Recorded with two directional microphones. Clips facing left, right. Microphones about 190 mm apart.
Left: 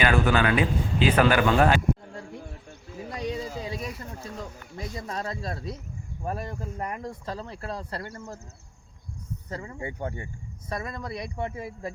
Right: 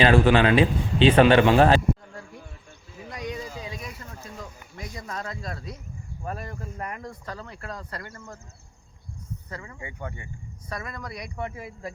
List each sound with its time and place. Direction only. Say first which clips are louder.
0.0 s a man's voice: right 4 dB; 30° right (ahead or behind)
3.0 s a sound: left 2 dB; 30° left (ahead or behind)
4.8 s speech: left 2 dB; 25° left (ahead or behind)
9.5 s speech: left 6 dB; 30° left (ahead or behind)
10.7 s speech: left 3 dB; 25° left (ahead or behind)